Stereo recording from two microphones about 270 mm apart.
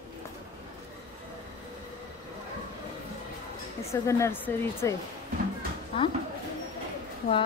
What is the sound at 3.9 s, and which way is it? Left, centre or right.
A woman's voice, centre.